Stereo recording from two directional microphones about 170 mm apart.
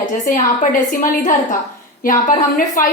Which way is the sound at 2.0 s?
50° left (ahead or behind).